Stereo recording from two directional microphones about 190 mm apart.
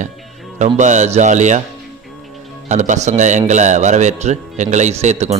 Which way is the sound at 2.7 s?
40° right (ahead or behind).